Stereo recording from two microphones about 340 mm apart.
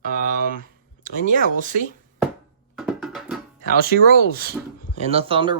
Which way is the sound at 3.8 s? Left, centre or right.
Right.